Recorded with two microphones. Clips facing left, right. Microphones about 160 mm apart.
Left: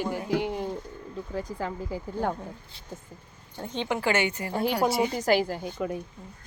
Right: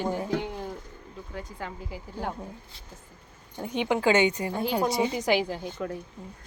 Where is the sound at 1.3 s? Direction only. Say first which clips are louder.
Left 5 dB; 35° left (ahead or behind).